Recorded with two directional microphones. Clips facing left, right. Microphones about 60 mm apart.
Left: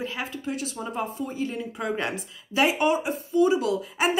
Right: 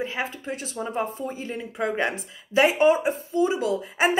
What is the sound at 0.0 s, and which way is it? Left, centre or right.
A woman's voice, right.